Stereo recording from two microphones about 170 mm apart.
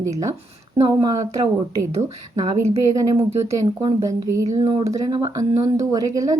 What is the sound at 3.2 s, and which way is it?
Speech, 25° right (ahead or behind).